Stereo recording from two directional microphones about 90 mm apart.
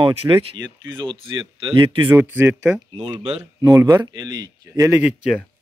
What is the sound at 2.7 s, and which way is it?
Speech, 10° right (ahead or behind).